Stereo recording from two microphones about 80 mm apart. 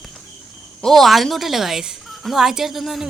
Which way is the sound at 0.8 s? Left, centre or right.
Centre.